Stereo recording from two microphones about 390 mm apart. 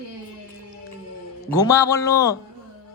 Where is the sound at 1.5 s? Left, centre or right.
Centre.